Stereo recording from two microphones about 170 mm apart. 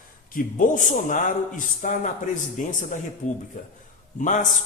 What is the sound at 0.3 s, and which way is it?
A man's voice, 55° left (ahead or behind).